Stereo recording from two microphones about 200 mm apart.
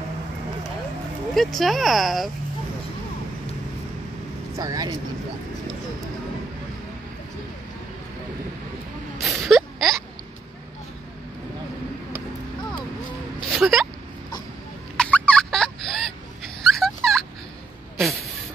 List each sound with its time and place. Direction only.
1.3 s speech: centre (ahead or behind)
4.6 s speech: 20° right (ahead or behind)
9.2 s a sound: centre (ahead or behind)
13.5 s a sound: centre (ahead or behind)
15.0 s turkey: 5° left (ahead or behind)
17.9 s snake: centre (ahead or behind)